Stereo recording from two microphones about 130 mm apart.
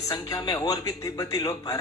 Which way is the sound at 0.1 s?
25° left (ahead or behind).